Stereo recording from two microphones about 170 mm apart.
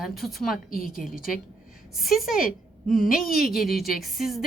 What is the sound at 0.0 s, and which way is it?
A woman's voice, centre (ahead or behind).